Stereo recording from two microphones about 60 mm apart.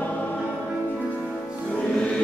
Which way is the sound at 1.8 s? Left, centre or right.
Centre.